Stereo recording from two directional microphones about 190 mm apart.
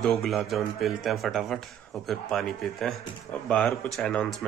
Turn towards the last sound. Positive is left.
turn(degrees=5)  # may be behind; listen again after turning